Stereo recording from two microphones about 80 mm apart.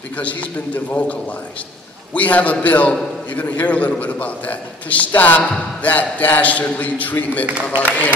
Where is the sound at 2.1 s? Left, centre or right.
Centre.